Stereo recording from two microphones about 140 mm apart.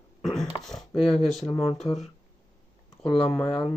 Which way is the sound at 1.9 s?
20° left (ahead or behind).